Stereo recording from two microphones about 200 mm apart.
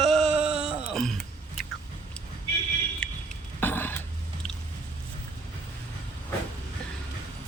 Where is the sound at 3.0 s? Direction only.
5° left (ahead or behind).